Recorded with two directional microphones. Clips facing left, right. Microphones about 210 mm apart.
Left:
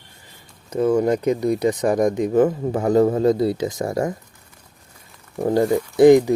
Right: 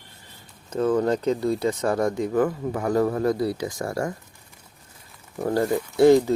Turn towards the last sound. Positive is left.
turn(degrees=15)  # may be behind; listen again after turning